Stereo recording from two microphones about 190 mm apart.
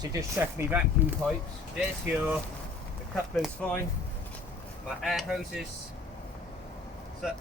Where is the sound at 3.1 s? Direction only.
5° left (ahead or behind).